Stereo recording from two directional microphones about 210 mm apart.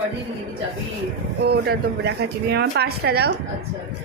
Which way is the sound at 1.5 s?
50° right (ahead or behind).